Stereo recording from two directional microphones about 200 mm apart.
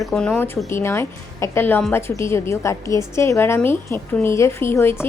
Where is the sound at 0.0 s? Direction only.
5° left (ahead or behind).